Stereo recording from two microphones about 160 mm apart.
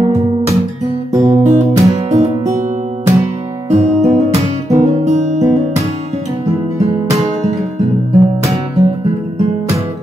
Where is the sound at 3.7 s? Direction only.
45° right (ahead or behind).